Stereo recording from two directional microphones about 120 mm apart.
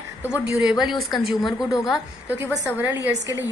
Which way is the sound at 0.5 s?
5° right (ahead or behind).